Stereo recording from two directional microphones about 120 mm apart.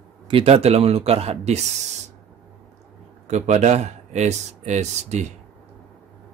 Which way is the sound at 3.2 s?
80° right.